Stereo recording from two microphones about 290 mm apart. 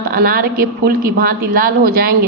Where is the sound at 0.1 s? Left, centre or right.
Right.